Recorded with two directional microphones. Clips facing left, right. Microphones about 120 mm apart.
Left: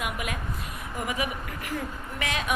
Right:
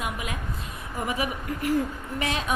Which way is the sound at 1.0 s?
35° right (ahead or behind).